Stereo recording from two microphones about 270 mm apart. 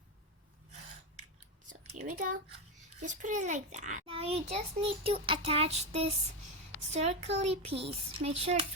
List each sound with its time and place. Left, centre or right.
2.0 s a child's voice: right